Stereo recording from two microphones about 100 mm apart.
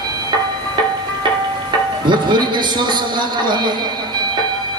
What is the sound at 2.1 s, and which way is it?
A man's voice, 50° right (ahead or behind).